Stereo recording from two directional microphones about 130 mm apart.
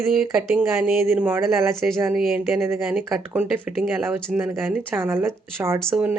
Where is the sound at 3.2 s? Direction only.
15° right (ahead or behind).